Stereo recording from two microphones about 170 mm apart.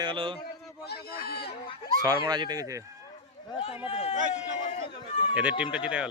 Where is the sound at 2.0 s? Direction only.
20° right (ahead or behind).